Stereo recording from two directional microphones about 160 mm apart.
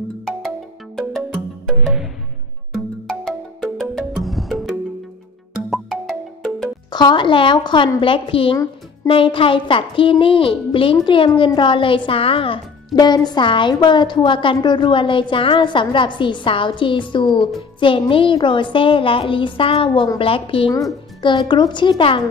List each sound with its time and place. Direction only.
1.3 s music: 5° right (ahead or behind)
5.7 s music: centre (ahead or behind)
6.9 s speech: 25° left (ahead or behind)